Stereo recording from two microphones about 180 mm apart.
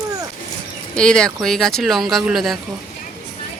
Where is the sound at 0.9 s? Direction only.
5° left (ahead or behind).